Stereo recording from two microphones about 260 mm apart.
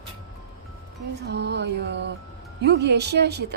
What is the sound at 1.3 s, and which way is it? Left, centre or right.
Speech, right.